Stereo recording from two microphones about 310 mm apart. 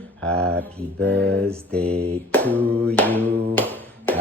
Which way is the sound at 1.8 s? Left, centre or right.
Centre.